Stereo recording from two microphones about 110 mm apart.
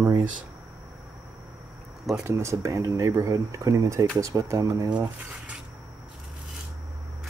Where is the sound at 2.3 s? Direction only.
25° right (ahead or behind).